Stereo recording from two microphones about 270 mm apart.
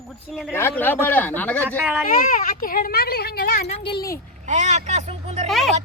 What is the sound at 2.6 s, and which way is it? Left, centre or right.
A woman's voice, left.